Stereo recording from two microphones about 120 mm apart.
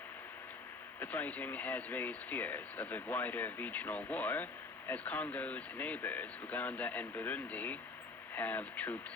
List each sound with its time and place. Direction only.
0.9 s speech: 15° left (ahead or behind)